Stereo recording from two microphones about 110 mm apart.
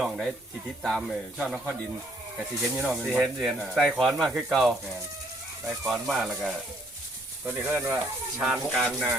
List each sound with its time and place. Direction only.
0.0 s speech: centre (ahead or behind)
7.4 s speech: 20° right (ahead or behind)
8.4 s speech: 5° right (ahead or behind)